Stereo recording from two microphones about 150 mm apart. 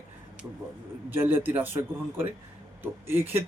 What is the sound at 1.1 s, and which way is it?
Speech, 15° right (ahead or behind).